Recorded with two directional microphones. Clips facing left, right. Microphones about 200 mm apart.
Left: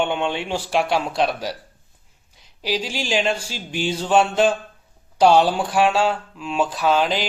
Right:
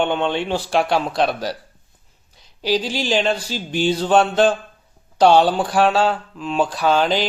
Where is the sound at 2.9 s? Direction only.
10° left (ahead or behind).